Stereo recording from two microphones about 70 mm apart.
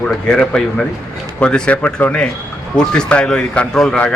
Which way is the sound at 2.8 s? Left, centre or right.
Centre.